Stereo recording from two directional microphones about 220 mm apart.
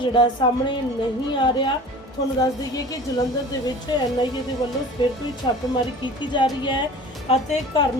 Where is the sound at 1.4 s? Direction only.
20° left (ahead or behind).